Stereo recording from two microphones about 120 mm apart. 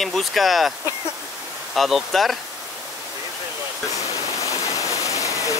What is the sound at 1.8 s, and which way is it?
Speech, centre (ahead or behind).